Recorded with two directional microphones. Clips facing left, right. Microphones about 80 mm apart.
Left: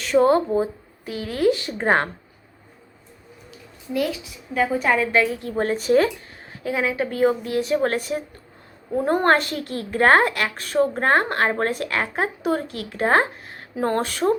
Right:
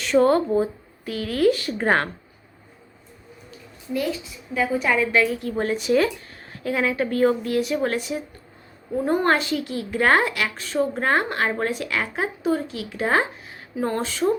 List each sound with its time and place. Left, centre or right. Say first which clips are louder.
0.2 s speech: left 1 dB; centre
3.9 s a woman's voice: left 1 dB; left
4.6 s a woman's voice: left 1 dB; left
6.4 s speech: even; centre; by 8.2 s left
9.0 s a woman's voice: left 2 dB; left